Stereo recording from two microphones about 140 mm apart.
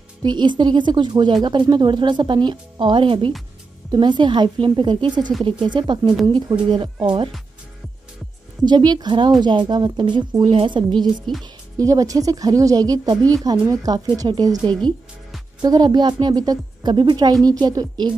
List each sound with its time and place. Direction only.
0.2 s speech: 30° right (ahead or behind)
8.6 s speech: 30° right (ahead or behind)
14.7 s music: 5° left (ahead or behind)
15.6 s speech: 30° right (ahead or behind)